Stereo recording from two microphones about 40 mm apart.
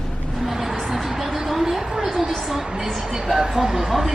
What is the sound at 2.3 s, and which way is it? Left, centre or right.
Speech, centre.